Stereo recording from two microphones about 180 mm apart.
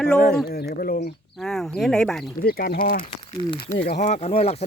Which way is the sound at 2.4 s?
55° left (ahead or behind).